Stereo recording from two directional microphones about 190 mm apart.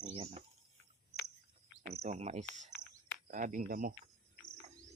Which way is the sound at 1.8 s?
35° right (ahead or behind).